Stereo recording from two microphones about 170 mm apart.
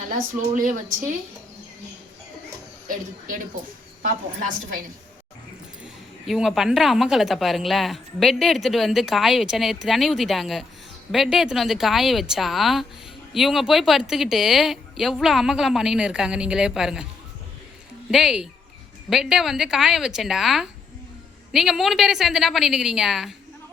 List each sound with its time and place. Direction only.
0.1 s a woman's voice: 50° right (ahead or behind)
2.8 s a woman's voice: 50° right (ahead or behind)
6.2 s speech: centre (ahead or behind)
18.1 s speech: 5° right (ahead or behind)